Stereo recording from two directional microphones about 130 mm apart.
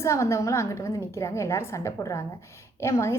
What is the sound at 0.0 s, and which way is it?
A woman's voice, 20° left (ahead or behind).